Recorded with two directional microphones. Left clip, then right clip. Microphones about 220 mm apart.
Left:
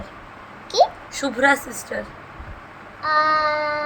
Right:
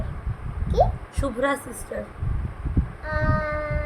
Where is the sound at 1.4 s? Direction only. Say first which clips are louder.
Left 8 dB; 10° right (ahead or behind).